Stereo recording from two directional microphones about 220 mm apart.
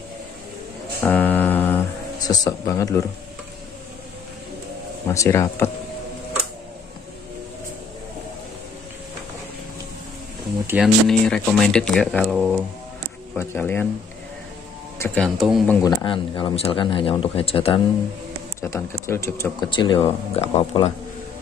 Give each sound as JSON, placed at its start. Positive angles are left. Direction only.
{"t": 1.0, "sound": "a sound", "side_deg": 10}
{"t": 5.0, "sound": "speech", "side_deg": 15}
{"t": 10.7, "sound": "speech", "side_deg": 0}
{"t": 13.4, "sound": "speech", "side_deg": 10}
{"t": 15.0, "sound": "speech", "side_deg": 5}
{"t": 15.8, "sound": "speech", "side_deg": 20}
{"t": 18.6, "sound": "speech", "side_deg": 10}